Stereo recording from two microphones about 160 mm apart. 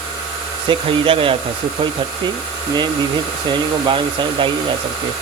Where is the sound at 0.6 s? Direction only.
35° right (ahead or behind).